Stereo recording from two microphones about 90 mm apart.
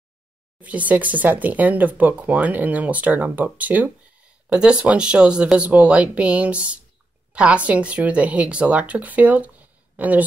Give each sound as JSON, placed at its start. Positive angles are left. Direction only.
{"t": 0.6, "sound": "speech", "side_deg": -15}